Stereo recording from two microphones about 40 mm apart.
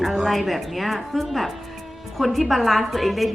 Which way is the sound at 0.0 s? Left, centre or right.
Centre.